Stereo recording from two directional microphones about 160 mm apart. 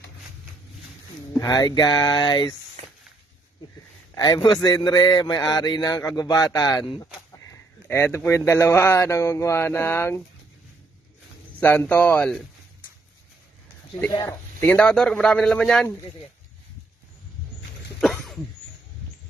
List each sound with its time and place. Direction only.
1.4 s a man's voice: 25° left (ahead or behind)
4.1 s a man's voice: 25° left (ahead or behind)
11.6 s speech: 15° left (ahead or behind)
13.9 s a man's voice: 20° left (ahead or behind); by 15.9 s 5° left (ahead or behind)